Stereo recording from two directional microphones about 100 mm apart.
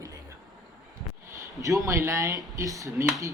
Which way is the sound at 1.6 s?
35° right (ahead or behind).